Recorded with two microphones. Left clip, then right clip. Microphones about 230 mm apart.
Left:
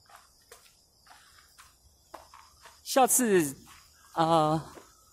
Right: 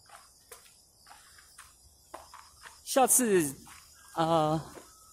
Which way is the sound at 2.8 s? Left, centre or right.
Centre.